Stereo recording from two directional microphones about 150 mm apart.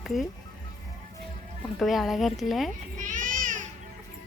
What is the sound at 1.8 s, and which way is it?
Speech, centre (ahead or behind).